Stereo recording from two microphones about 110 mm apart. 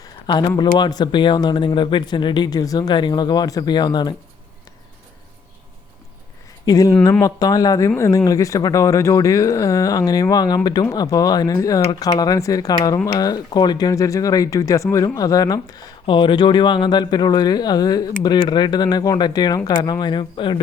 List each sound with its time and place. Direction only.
0.0 s speech: 40° left (ahead or behind)
6.7 s speech: 35° left (ahead or behind)
16.0 s speech: 45° left (ahead or behind)